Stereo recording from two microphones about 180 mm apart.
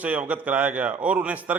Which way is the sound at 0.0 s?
10° right (ahead or behind).